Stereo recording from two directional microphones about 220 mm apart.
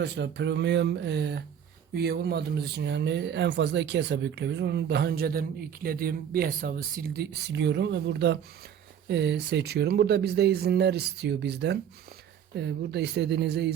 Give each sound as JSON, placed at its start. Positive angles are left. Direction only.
{"t": 0.0, "sound": "speech", "side_deg": -50}